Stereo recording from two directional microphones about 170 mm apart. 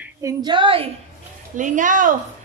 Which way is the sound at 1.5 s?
50° right (ahead or behind).